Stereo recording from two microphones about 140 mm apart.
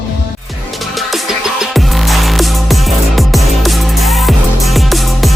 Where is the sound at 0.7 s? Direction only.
Centre (ahead or behind).